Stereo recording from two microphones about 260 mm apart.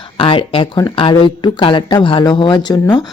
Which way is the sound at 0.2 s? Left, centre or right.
Left.